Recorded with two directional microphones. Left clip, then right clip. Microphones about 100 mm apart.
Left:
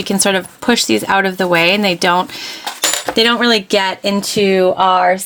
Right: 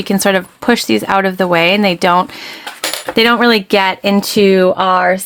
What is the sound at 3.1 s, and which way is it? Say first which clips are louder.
Speech: right 3 dB; 60° right (ahead or behind).